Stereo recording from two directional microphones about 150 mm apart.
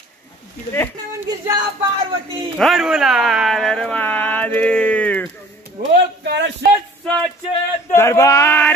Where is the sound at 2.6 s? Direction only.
Centre (ahead or behind).